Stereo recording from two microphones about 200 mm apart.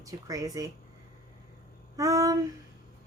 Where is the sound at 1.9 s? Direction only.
15° right (ahead or behind).